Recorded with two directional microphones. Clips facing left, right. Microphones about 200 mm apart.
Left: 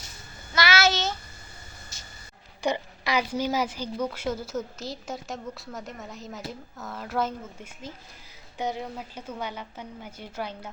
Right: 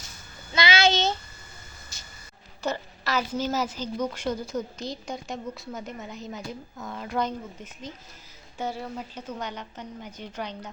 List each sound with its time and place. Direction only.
0.5 s child singing: 20° right (ahead or behind)
2.6 s a woman's voice: 15° left (ahead or behind)